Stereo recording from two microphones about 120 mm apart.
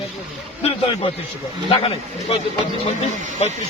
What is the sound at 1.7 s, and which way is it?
Speech, 55° left (ahead or behind).